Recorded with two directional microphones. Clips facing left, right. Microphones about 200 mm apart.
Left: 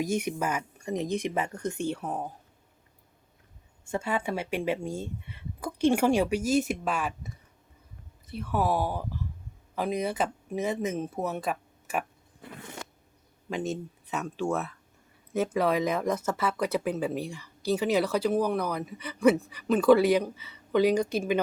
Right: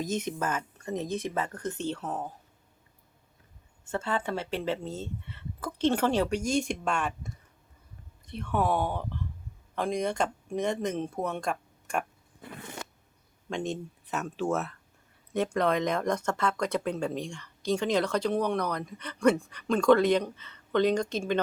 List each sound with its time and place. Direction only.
0.0 s speech: 10° left (ahead or behind)
3.8 s speech: 10° left (ahead or behind)
13.5 s speech: 5° left (ahead or behind)